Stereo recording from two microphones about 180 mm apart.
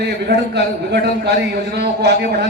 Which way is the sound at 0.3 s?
70° right (ahead or behind).